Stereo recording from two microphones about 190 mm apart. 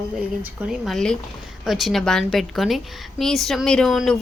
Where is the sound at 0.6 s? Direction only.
Centre (ahead or behind).